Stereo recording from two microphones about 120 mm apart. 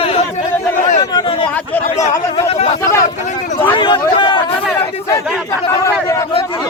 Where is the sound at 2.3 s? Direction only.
55° left (ahead or behind).